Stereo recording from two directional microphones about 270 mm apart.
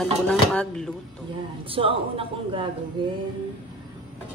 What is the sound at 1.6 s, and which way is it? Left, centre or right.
Speech, centre.